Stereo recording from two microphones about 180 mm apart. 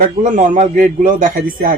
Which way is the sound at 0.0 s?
45° right (ahead or behind).